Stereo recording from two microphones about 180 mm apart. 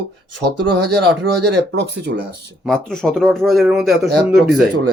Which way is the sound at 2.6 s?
5° left (ahead or behind).